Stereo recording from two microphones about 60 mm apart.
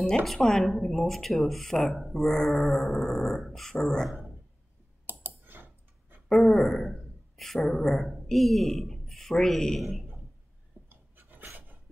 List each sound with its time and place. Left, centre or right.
0.0 s speech: centre
5.0 s typing: right
6.2 s speech: centre
10.9 s dog: right